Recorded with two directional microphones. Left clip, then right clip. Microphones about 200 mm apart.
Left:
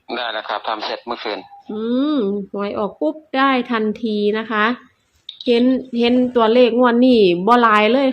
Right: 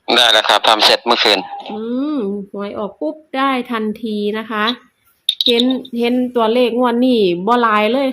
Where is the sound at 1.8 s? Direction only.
10° right (ahead or behind).